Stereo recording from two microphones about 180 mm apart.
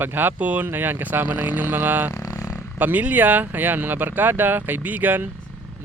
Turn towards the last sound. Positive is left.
turn(degrees=-10)  # may be behind; listen again after turning